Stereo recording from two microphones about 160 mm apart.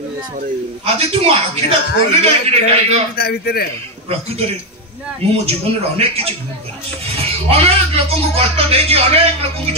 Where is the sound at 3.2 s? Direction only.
75° left (ahead or behind).